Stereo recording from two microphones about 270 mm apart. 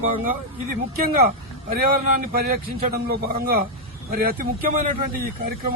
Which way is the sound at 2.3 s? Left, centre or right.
Right.